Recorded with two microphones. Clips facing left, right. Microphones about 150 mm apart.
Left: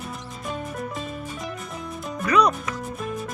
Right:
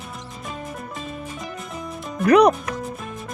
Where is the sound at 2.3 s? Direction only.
65° right (ahead or behind).